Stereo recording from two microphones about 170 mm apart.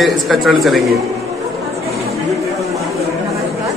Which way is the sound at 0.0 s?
Centre (ahead or behind).